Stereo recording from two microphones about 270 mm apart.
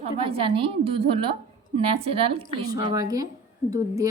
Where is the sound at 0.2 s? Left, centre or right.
Centre.